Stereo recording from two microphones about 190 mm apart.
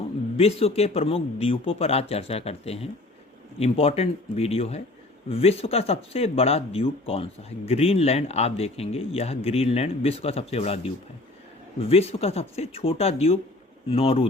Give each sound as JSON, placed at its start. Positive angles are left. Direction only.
{"t": 0.3, "sound": "speech", "side_deg": 30}